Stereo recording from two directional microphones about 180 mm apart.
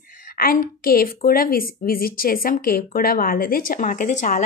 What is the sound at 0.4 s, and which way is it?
A woman's voice, 55° left (ahead or behind).